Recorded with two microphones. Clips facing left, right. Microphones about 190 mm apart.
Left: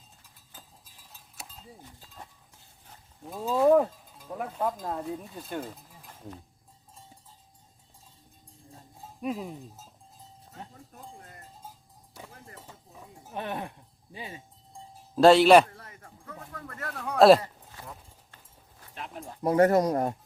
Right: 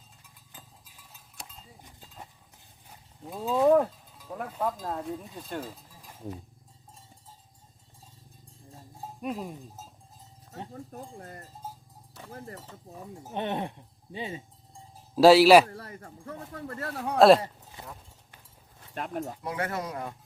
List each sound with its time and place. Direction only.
1.4 s a sound: 5° left (ahead or behind)
1.8 s livestock: 15° right (ahead or behind)
2.9 s livestock: 5° right (ahead or behind)
4.3 s speech: 5° left (ahead or behind)
5.6 s a sound: 10° right (ahead or behind)
9.2 s speech: centre (ahead or behind)
10.9 s speech: 40° right (ahead or behind)
13.3 s speech: 25° right (ahead or behind)
15.1 s speech: 5° right (ahead or behind)
15.7 s speech: 40° right (ahead or behind)
17.2 s speech: centre (ahead or behind)
17.4 s a sound: 20° right (ahead or behind)
18.9 s speech: 50° right (ahead or behind)
19.4 s speech: 40° left (ahead or behind)